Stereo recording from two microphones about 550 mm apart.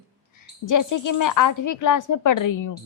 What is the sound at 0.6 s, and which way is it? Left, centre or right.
A woman's voice, left.